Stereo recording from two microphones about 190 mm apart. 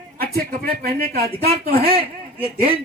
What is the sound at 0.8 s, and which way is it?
Speech, 55° right (ahead or behind).